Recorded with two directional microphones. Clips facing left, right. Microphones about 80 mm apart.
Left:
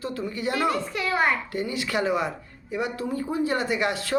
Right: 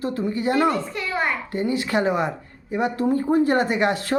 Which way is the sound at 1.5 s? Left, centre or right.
Right.